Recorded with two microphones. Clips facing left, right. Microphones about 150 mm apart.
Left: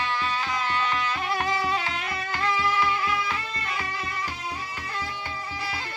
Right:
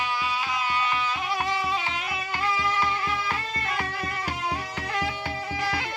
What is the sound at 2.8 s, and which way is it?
Music, 35° right (ahead or behind).